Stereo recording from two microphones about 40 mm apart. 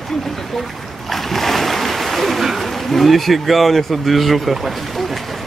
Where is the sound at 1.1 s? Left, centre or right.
Centre.